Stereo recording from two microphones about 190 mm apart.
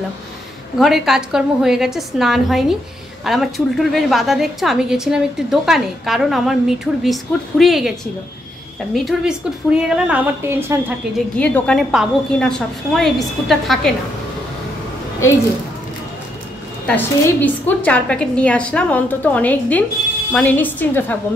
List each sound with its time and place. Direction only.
0.7 s a woman's voice: centre (ahead or behind)
8.9 s a woman's voice: centre (ahead or behind)
11.3 s a woman's voice: 5° left (ahead or behind)
16.8 s a woman's voice: 10° left (ahead or behind)